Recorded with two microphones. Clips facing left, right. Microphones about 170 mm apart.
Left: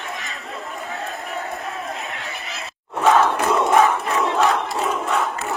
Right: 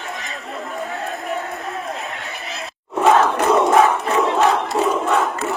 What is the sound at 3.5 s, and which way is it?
Crowd, centre (ahead or behind).